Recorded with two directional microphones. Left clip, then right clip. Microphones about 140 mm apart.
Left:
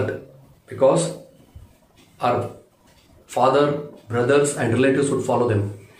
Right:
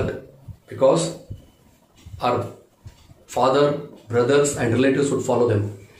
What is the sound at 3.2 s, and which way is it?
Speech, centre (ahead or behind).